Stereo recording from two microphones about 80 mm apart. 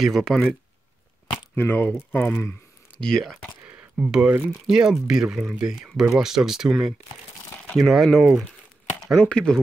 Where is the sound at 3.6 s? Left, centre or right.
Right.